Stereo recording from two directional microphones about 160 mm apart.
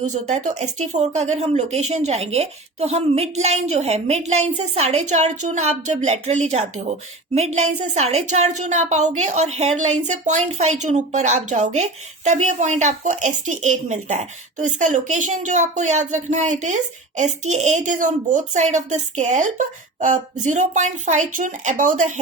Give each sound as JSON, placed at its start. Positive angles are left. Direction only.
{"t": 0.0, "sound": "a woman's voice", "side_deg": -45}